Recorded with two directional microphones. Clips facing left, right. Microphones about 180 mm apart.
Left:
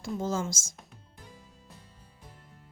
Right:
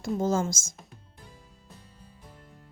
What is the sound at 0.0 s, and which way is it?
Speech, 45° right (ahead or behind).